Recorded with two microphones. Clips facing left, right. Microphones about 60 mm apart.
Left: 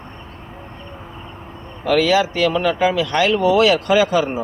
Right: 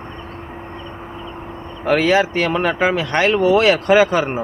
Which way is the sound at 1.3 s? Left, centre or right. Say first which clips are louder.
Right 5 dB; right.